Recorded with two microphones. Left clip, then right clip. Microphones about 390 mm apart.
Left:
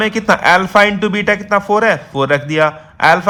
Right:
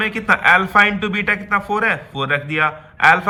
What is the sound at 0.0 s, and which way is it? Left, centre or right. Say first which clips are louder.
A man's voice: left 3 dB; centre.